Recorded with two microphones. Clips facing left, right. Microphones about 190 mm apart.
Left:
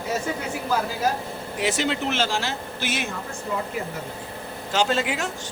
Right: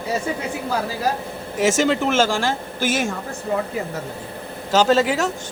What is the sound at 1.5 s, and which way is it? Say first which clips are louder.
Speech: right 7 dB; 45° right (ahead or behind).